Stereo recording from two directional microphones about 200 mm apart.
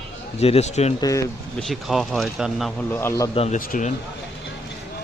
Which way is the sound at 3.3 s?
30° left (ahead or behind).